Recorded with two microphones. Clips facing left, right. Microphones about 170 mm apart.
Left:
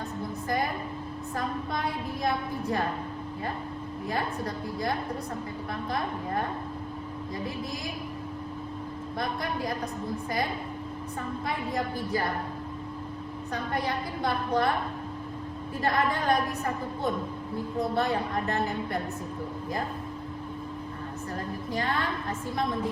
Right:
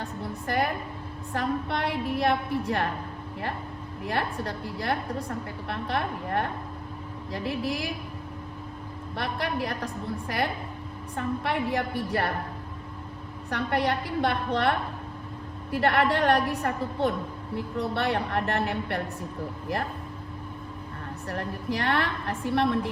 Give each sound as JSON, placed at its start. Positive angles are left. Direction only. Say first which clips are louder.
{"t": 0.4, "sound": "a woman's voice", "louder": "right 3 dB", "side_deg": -70}
{"t": 4.1, "sound": "a woman's voice", "louder": "right 2 dB", "side_deg": -70}
{"t": 9.1, "sound": "a woman's voice", "louder": "right 2 dB", "side_deg": -70}
{"t": 13.5, "sound": "a woman's voice", "louder": "right 4 dB", "side_deg": -70}
{"t": 21.3, "sound": "a woman's voice", "louder": "right 2 dB", "side_deg": -75}